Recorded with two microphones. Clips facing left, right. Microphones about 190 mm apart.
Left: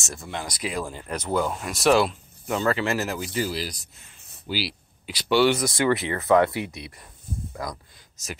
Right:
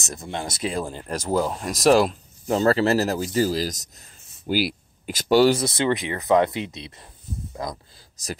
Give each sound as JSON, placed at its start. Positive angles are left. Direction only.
{"t": 0.0, "sound": "speech", "side_deg": -20}
{"t": 5.6, "sound": "speech", "side_deg": -25}